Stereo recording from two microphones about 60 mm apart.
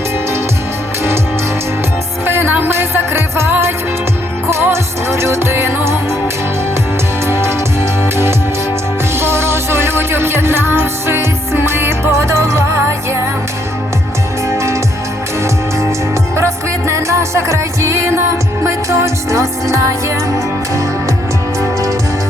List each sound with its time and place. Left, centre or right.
2.2 s music: right
7.3 s music: right
14.5 s music: right
16.3 s music: right
21.6 s music: right